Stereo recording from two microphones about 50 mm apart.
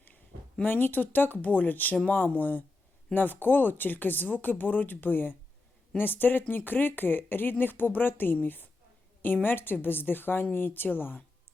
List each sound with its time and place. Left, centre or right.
0.6 s a woman's voice: left